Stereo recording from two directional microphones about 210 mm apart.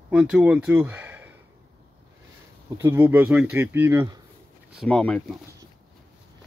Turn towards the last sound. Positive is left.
turn(degrees=5)  # may be behind; listen again after turning